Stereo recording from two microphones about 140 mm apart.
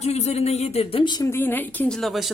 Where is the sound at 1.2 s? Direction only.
15° left (ahead or behind); by 2.3 s centre (ahead or behind).